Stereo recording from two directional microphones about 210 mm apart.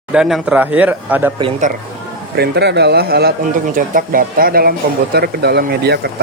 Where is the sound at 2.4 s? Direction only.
55° right (ahead or behind).